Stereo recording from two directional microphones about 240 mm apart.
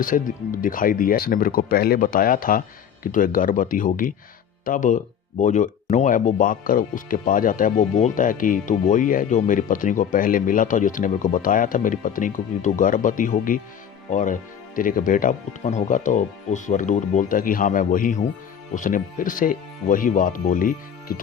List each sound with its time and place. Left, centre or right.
0.0 s speech: left